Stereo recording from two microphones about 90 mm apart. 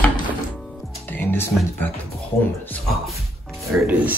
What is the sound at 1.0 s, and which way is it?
Music, 20° left (ahead or behind).